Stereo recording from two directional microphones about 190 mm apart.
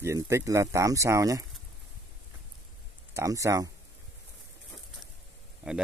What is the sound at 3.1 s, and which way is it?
Speech, 15° right (ahead or behind).